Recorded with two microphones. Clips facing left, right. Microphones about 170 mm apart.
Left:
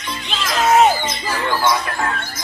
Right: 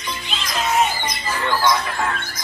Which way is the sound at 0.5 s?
70° left (ahead or behind).